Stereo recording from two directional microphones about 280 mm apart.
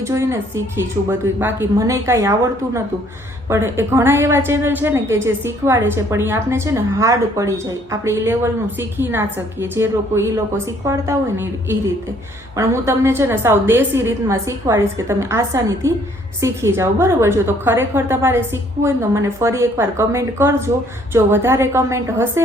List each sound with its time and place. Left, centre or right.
0.0 s a woman's voice: centre